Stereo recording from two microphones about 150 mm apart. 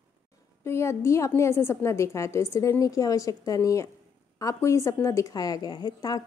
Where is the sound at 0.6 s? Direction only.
15° left (ahead or behind).